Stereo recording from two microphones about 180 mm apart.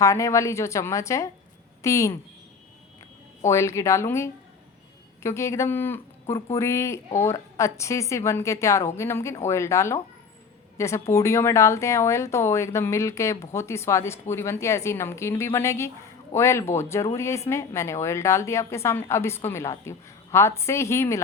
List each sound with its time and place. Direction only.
0.0 s a woman's voice: 15° left (ahead or behind)
3.4 s a woman's voice: 15° left (ahead or behind)